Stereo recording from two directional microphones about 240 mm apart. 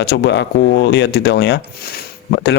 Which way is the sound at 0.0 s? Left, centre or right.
Left.